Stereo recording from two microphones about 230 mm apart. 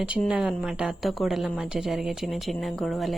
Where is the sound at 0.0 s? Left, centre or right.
Centre.